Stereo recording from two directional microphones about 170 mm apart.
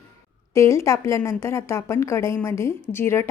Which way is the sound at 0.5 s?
15° left (ahead or behind).